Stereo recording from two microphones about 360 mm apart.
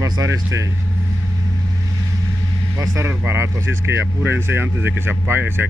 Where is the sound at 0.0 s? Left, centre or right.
Centre.